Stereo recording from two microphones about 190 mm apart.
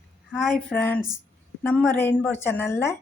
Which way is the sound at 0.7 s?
5° left (ahead or behind).